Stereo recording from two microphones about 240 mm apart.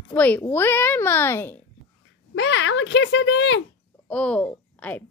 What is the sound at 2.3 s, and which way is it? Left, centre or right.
Speech, left.